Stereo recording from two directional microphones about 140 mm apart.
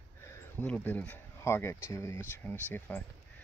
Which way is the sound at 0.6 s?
10° left (ahead or behind).